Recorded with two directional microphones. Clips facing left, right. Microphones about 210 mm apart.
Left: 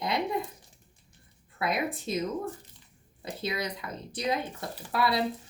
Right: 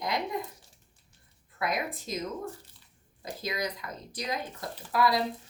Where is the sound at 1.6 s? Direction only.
30° left (ahead or behind).